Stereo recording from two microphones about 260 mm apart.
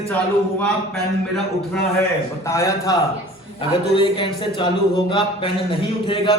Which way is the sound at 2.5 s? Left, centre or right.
Centre.